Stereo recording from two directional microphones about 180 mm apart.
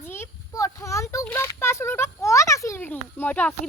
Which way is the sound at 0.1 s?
15° left (ahead or behind).